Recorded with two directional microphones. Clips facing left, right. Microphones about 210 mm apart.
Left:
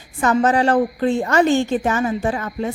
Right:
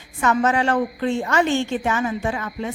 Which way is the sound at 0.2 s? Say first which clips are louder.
Left 3 dB; 35° left (ahead or behind).